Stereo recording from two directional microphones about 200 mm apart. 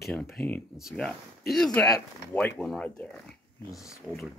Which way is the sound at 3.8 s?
15° left (ahead or behind).